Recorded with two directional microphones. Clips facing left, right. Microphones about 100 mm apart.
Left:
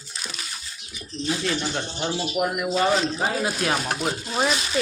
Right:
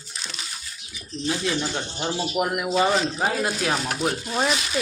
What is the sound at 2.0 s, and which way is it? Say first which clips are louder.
Speech: even; 5° right (ahead or behind).